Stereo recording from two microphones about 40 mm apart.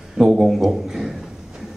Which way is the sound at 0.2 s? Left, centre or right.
Centre.